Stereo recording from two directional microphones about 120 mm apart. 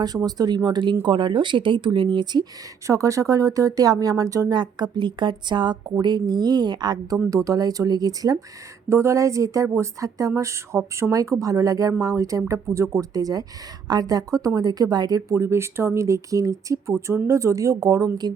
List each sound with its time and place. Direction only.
0.0 s speech: 35° right (ahead or behind)
2.8 s speech: 25° right (ahead or behind)